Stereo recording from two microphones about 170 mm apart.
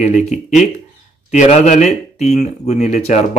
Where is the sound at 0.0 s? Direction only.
45° left (ahead or behind).